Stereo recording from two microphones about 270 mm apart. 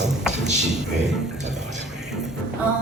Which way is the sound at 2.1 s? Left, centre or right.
Centre.